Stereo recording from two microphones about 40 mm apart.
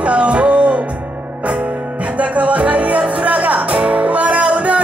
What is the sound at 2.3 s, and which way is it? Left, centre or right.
Music, right.